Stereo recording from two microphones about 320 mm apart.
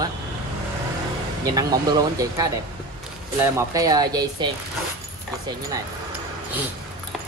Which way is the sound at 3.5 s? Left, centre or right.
Centre.